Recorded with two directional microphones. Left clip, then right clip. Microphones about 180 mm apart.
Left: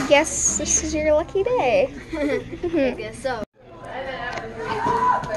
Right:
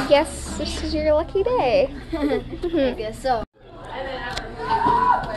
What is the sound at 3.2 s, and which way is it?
Speech, 65° right (ahead or behind).